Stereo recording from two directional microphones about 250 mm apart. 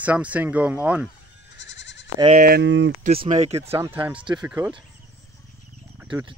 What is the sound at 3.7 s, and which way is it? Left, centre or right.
Speech, centre.